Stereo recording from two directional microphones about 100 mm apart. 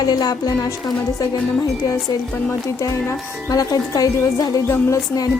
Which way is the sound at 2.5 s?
30° left (ahead or behind).